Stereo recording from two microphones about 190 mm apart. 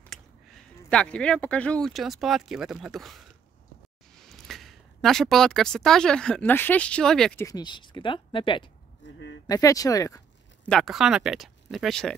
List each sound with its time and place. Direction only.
0.0 s a woman's voice: 5° left (ahead or behind)
7.4 s speech: 20° left (ahead or behind)
10.7 s speech: centre (ahead or behind)